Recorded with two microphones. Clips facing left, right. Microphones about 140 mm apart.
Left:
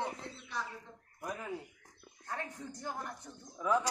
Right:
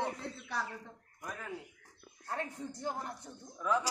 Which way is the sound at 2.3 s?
30° right (ahead or behind).